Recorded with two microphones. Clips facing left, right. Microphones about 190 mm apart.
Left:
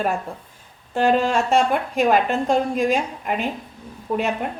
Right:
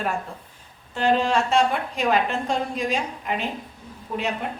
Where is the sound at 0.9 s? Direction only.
50° left (ahead or behind).